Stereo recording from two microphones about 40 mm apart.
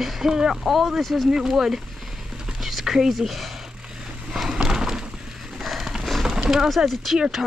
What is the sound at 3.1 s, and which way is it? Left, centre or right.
Speech, centre.